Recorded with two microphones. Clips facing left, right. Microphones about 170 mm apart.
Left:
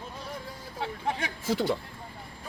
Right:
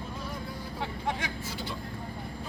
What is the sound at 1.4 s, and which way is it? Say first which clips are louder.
Speech: left 10 dB; 90° left.